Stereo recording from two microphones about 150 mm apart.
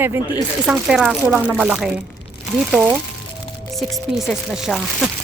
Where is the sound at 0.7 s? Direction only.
5° right (ahead or behind).